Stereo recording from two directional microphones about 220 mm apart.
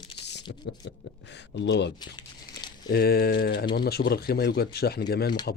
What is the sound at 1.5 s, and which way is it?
Speech, 55° left (ahead or behind).